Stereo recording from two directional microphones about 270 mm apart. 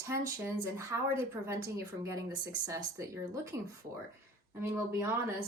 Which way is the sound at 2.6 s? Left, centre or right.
Centre.